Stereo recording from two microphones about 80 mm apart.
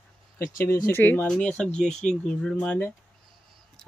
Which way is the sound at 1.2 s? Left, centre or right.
Centre.